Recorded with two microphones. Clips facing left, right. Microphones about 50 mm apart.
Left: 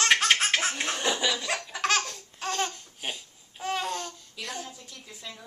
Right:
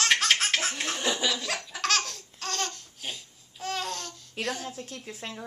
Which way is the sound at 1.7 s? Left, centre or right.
Centre.